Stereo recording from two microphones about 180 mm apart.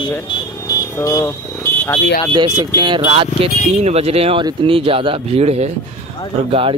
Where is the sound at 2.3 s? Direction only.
20° right (ahead or behind).